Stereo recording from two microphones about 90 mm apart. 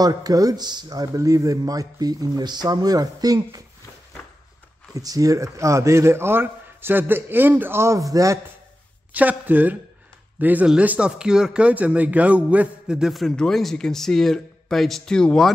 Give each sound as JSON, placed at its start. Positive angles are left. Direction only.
{"t": 0.0, "sound": "speech", "side_deg": -45}
{"t": 4.9, "sound": "speech", "side_deg": -40}
{"t": 9.1, "sound": "a man's voice", "side_deg": -20}